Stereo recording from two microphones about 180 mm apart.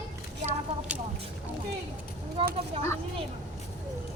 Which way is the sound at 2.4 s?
30° right (ahead or behind).